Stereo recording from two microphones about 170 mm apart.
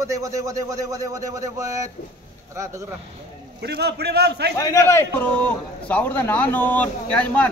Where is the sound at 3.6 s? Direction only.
75° right (ahead or behind).